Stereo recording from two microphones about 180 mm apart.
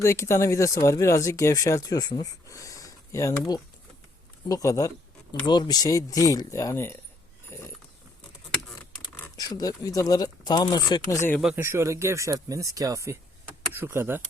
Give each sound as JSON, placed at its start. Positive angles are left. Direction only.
{"t": 0.0, "sound": "speech", "side_deg": 15}
{"t": 9.4, "sound": "speech", "side_deg": 20}
{"t": 11.3, "sound": "speech", "side_deg": -5}
{"t": 11.6, "sound": "speech", "side_deg": -15}